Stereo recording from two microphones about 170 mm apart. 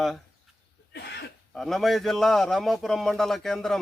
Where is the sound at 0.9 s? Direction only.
75° left (ahead or behind).